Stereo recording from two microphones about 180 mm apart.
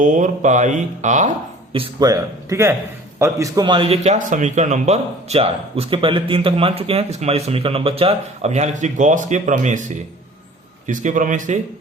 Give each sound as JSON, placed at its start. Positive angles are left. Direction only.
{"t": 0.0, "sound": "speech", "side_deg": -45}
{"t": 1.7, "sound": "a man's voice", "side_deg": -25}